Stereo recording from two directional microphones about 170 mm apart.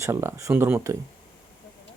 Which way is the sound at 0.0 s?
15° right (ahead or behind).